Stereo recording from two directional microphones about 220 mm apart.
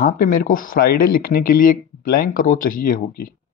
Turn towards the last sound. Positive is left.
turn(degrees=40)  # may be behind; listen again after turning